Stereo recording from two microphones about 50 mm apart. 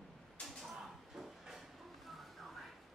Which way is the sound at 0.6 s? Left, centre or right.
Centre.